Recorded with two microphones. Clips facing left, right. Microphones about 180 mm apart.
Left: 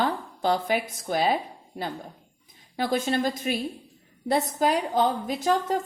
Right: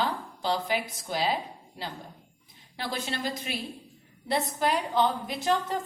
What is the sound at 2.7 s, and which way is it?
A woman's voice, 50° left (ahead or behind).